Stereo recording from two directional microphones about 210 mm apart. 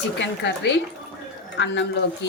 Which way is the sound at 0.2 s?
55° left (ahead or behind).